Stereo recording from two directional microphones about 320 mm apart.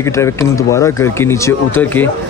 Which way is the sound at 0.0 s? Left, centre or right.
Centre.